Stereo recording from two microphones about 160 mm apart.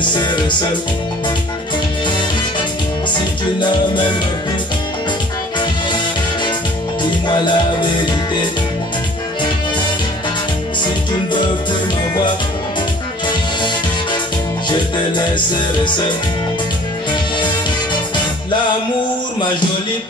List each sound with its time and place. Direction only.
0.0 s music: 30° left (ahead or behind)
7.0 s music: 30° left (ahead or behind)